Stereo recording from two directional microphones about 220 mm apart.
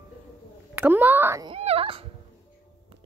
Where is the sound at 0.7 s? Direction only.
10° right (ahead or behind).